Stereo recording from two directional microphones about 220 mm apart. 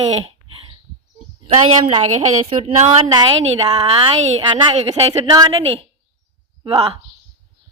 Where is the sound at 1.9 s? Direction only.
25° right (ahead or behind).